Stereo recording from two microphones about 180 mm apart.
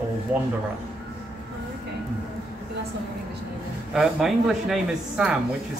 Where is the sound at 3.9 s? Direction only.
Centre (ahead or behind).